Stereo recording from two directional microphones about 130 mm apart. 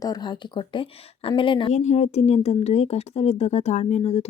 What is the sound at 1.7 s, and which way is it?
Speech, 65° left (ahead or behind).